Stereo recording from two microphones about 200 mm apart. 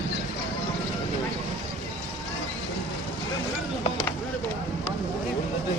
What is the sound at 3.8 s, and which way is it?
Vehicle, 20° left (ahead or behind).